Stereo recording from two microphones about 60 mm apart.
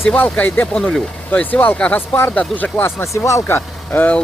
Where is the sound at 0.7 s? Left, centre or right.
Centre.